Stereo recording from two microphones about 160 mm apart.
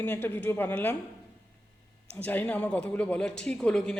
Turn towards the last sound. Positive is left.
turn(degrees=5)  # may be behind; listen again after turning